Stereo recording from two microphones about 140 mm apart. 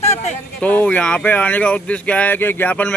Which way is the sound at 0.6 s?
10° left (ahead or behind).